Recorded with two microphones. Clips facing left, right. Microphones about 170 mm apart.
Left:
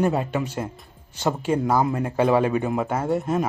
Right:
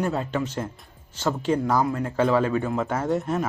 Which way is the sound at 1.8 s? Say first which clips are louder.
Left 1 dB; 20° left (ahead or behind).